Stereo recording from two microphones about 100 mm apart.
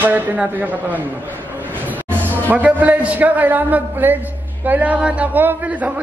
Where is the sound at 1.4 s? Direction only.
20° right (ahead or behind).